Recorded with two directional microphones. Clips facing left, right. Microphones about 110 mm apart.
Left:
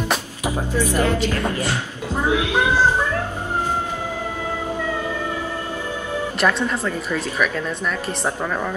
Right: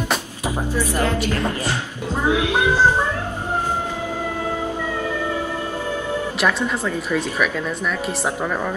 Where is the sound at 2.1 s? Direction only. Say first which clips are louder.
Even; 15° right (ahead or behind).